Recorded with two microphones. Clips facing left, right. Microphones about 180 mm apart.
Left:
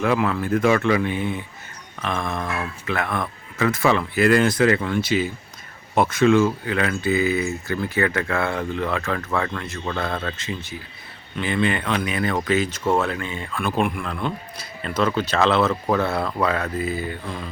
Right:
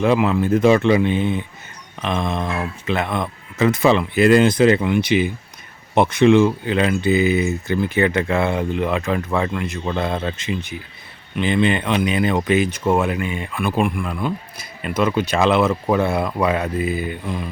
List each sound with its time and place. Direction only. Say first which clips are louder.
0.0 s speech: right 4 dB; 20° right (ahead or behind)
13.6 s a man's voice: right 2 dB; 5° right (ahead or behind)